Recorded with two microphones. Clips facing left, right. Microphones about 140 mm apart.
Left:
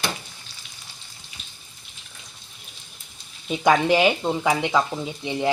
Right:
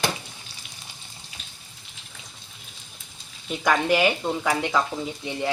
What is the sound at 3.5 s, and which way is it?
Speech, 20° left (ahead or behind).